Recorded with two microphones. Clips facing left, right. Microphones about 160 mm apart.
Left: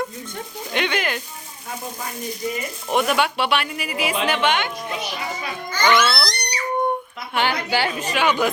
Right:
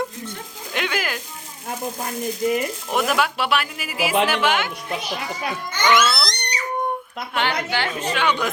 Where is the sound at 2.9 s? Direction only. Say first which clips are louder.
Left 2 dB; centre (ahead or behind).